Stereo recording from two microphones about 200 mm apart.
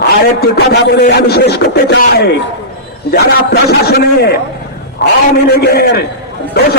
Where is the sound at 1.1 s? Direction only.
55° left (ahead or behind).